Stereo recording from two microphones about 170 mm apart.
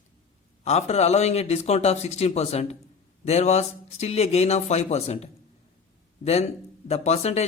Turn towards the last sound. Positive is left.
turn(degrees=40)  # may be behind; listen again after turning